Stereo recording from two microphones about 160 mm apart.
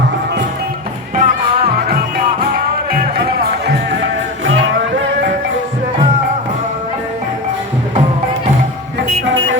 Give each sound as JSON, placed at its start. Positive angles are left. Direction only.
{"t": 1.1, "sound": "music", "side_deg": -50}